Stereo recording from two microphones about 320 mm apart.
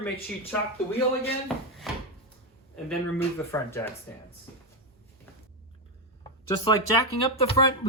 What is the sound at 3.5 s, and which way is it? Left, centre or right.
Speech, centre.